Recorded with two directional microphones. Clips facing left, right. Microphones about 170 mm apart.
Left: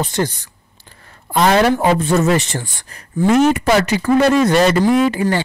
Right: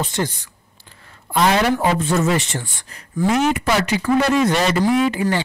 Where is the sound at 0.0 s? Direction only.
40° left (ahead or behind).